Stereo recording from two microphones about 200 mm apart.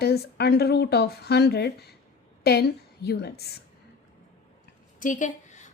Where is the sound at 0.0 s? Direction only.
55° left (ahead or behind).